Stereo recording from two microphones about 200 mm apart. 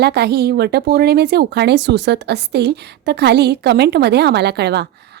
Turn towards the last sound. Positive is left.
turn(degrees=-55)  # may be behind; listen again after turning